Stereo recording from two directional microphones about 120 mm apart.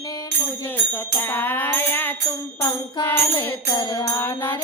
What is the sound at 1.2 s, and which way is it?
Music, 15° left (ahead or behind).